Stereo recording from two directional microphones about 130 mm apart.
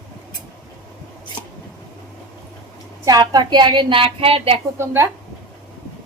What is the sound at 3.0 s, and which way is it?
A woman's voice, 30° right (ahead or behind).